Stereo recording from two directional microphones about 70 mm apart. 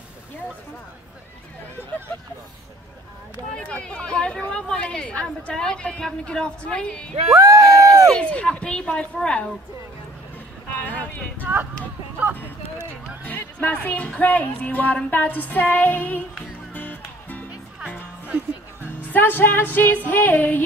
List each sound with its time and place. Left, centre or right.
3.5 s speech: centre
7.3 s speech: right
8.3 s speech: centre
10.9 s a sound: left
12.2 s speech: right
13.2 s speech: left
16.7 s music: left
18.3 s music: right
19.1 s speech: left